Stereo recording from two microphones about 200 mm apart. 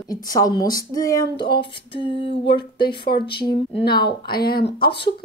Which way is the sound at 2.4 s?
55° left (ahead or behind).